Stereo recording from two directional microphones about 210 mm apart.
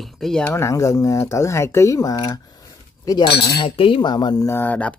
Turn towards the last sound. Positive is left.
turn(degrees=5)  # may be behind; listen again after turning